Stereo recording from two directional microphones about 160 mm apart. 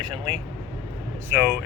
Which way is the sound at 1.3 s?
10° right (ahead or behind).